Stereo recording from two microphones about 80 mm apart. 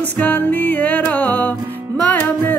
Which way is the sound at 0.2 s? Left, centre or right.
Left.